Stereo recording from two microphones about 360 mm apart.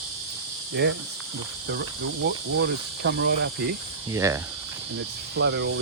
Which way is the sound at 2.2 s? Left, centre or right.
Right.